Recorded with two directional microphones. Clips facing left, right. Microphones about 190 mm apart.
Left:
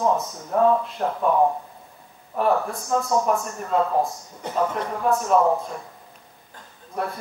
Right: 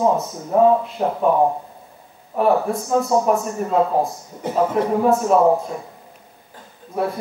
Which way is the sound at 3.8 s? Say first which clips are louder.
Right 3 dB; 20° right (ahead or behind).